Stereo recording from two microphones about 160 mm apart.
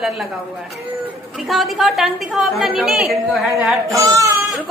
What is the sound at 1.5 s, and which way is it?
A woman's voice, centre (ahead or behind).